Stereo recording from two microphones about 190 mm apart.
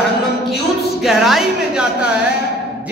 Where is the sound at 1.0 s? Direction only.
Centre (ahead or behind).